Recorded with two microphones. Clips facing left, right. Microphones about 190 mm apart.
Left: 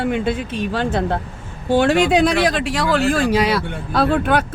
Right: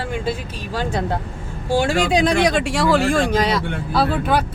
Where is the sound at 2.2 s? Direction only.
Centre (ahead or behind).